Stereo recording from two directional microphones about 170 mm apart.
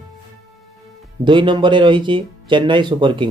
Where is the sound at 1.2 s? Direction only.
25° right (ahead or behind).